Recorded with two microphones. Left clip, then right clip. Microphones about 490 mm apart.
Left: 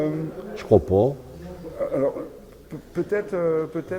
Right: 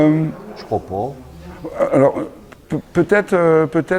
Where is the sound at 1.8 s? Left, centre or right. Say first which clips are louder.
Right 10 dB; right.